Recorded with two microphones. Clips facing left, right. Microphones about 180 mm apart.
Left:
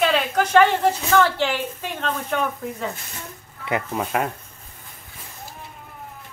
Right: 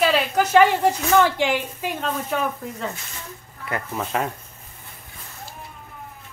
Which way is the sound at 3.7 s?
20° left (ahead or behind).